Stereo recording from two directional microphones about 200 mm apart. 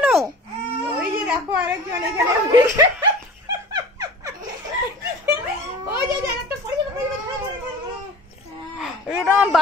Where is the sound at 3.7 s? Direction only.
20° right (ahead or behind).